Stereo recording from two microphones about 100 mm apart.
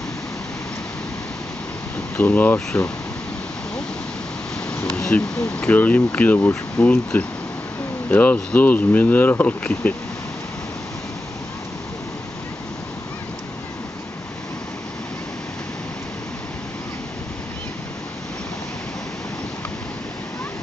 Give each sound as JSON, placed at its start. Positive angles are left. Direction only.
{"t": 2.1, "sound": "speech", "side_deg": 15}
{"t": 4.6, "sound": "speech", "side_deg": 10}